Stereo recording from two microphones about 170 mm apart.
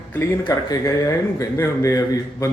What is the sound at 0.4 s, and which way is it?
A man's voice, 20° left (ahead or behind).